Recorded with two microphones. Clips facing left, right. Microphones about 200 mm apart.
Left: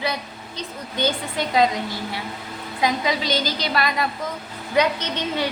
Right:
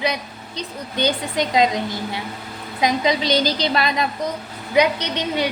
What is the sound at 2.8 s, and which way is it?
A woman's voice, 20° right (ahead or behind).